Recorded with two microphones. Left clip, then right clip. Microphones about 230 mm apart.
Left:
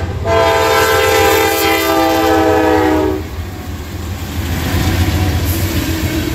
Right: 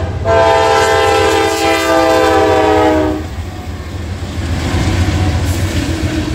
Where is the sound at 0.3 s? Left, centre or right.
Centre.